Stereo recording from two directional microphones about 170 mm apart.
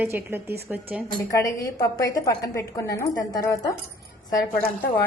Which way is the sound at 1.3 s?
20° left (ahead or behind).